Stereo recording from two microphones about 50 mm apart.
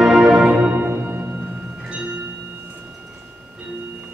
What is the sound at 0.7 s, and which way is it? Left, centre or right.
Music, right.